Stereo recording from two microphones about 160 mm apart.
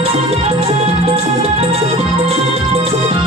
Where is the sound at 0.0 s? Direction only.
35° right (ahead or behind).